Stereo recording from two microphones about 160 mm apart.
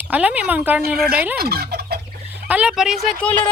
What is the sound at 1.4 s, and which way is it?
Fowl, 75° right (ahead or behind).